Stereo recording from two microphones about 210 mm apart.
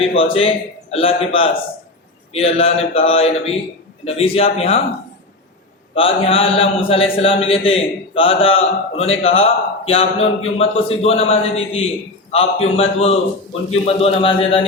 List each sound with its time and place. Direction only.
0.0 s a man's voice: 25° left (ahead or behind)
5.9 s a man's voice: 25° left (ahead or behind)